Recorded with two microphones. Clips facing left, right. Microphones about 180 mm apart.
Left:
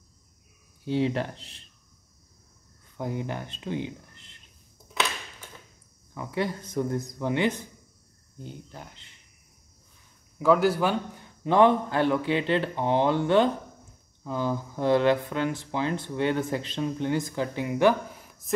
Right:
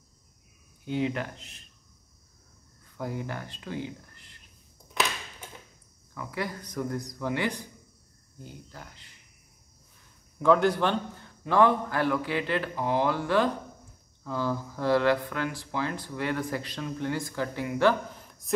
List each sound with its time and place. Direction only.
0.8 s speech: 30° left (ahead or behind)
3.0 s speech: 20° left (ahead or behind)
6.1 s speech: 25° left (ahead or behind)
10.4 s speech: 5° left (ahead or behind)
11.4 s speech: 20° left (ahead or behind)